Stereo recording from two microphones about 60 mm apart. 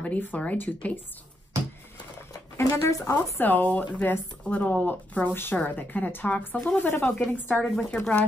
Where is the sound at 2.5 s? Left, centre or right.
Left.